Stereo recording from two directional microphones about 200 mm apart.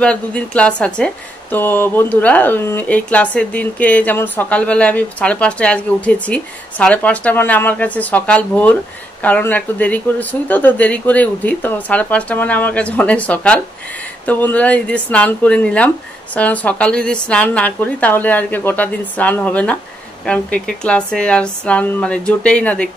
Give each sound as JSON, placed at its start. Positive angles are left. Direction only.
{"t": 0.0, "sound": "a woman's voice", "side_deg": 5}